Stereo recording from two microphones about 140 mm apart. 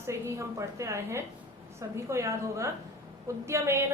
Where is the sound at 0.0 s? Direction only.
20° right (ahead or behind).